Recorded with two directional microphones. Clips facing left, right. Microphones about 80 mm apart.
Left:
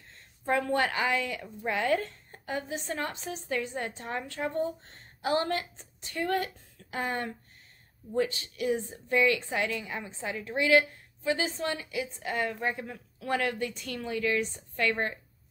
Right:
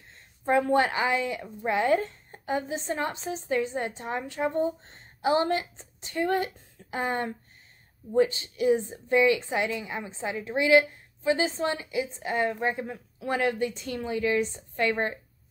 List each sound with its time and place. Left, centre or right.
0.1 s a woman's voice: right